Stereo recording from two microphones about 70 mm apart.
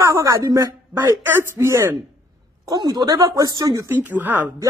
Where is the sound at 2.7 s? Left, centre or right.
Right.